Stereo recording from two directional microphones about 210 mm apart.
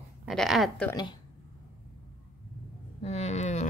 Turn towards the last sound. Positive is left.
turn(degrees=35)  # may be behind; listen again after turning